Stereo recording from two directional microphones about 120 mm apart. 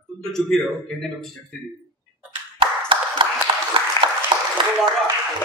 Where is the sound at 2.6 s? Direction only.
45° right (ahead or behind).